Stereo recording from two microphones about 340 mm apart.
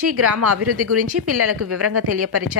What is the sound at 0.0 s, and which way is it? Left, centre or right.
A woman's voice, right.